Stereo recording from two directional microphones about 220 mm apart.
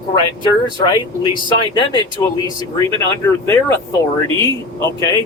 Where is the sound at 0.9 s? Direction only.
20° left (ahead or behind).